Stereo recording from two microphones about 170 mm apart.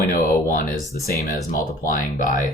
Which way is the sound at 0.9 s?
65° left (ahead or behind).